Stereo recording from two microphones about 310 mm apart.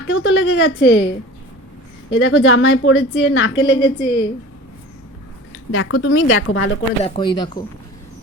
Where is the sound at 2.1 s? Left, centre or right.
Left.